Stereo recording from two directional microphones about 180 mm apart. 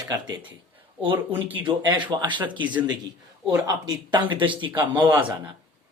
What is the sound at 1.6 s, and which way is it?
Speech, 25° right (ahead or behind).